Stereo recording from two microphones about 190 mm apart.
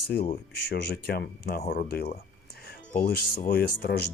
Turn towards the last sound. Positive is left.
turn(degrees=55)  # may be behind; listen again after turning